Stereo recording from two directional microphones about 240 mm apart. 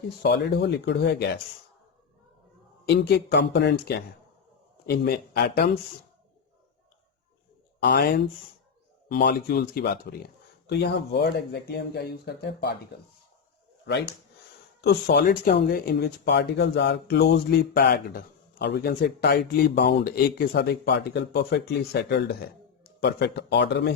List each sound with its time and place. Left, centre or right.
0.2 s speech: left
2.8 s speech: left
7.8 s speech: left
14.8 s speech: left